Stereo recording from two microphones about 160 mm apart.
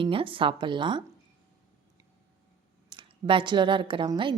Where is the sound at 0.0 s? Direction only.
35° right (ahead or behind).